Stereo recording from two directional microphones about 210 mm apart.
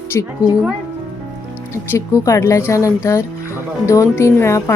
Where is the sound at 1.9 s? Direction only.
15° left (ahead or behind).